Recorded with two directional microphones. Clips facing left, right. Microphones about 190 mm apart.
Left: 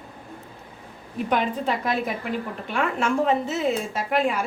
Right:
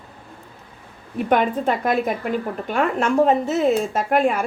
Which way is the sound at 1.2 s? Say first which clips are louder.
Right 5 dB; 50° right (ahead or behind).